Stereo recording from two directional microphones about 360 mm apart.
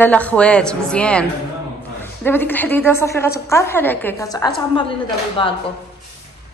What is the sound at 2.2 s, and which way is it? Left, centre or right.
A woman's voice, centre.